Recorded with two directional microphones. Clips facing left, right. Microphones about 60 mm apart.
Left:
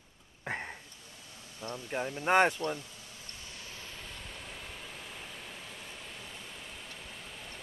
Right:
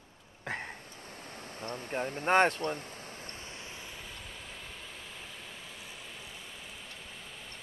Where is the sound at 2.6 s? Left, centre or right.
Right.